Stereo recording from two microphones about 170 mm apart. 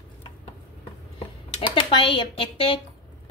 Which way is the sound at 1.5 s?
30° left (ahead or behind).